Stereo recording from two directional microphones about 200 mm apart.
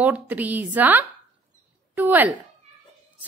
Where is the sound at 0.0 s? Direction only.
10° right (ahead or behind).